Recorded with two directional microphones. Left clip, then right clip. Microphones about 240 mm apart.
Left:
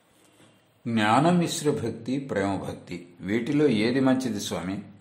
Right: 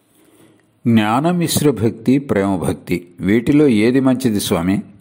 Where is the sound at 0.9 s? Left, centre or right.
Right.